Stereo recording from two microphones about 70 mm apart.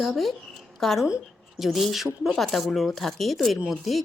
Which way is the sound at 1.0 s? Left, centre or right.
Centre.